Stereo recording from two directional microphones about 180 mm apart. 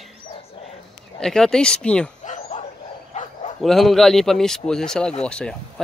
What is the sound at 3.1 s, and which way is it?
Bow-wow, 35° left (ahead or behind).